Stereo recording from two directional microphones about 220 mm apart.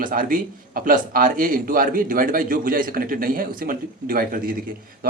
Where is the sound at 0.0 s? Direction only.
40° right (ahead or behind).